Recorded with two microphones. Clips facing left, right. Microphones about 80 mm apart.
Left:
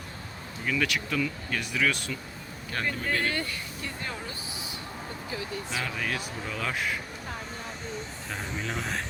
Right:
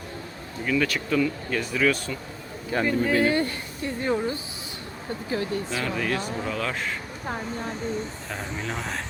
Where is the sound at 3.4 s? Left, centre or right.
Right.